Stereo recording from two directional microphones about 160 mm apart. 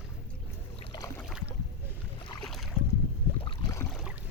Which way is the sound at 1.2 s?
5° right (ahead or behind).